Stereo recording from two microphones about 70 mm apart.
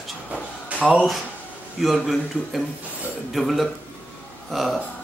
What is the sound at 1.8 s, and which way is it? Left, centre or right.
Speech, centre.